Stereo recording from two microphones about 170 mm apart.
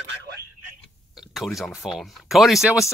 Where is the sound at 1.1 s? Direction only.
Centre (ahead or behind).